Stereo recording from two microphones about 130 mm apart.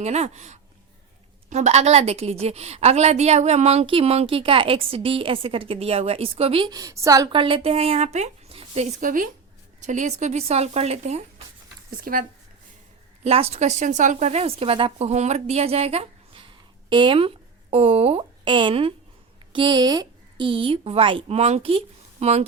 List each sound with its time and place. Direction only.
0.0 s a woman's voice: 60° right (ahead or behind)
6.7 s a woman's voice: 30° right (ahead or behind)
7.3 s speech: 40° right (ahead or behind); by 9.2 s 85° right
9.8 s speech: 70° right (ahead or behind)
12.1 s speech: 90° right
13.2 s a woman's voice: 50° right (ahead or behind)
16.9 s speech: 40° right (ahead or behind)
19.5 s a woman's voice: 35° right (ahead or behind); by 22.4 s 55° right (ahead or behind)